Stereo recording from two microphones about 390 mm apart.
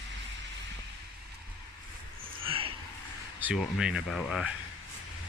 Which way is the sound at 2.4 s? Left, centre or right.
Centre.